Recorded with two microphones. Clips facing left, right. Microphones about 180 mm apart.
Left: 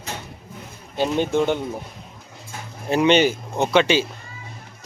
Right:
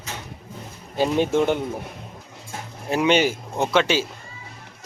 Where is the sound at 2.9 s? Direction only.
5° right (ahead or behind).